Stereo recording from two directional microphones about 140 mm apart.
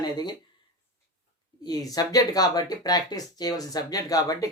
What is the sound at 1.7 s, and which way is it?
Speech, 25° left (ahead or behind).